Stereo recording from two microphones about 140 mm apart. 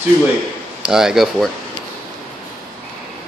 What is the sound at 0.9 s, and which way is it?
Speech, 5° right (ahead or behind).